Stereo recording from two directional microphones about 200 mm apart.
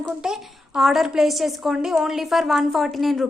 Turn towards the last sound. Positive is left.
turn(degrees=0)  # may be behind; listen again after turning